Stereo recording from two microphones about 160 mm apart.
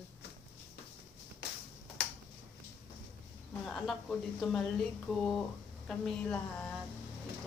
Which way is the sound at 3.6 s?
Centre (ahead or behind).